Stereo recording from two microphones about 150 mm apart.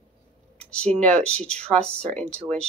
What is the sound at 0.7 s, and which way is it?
Speech, 5° left (ahead or behind).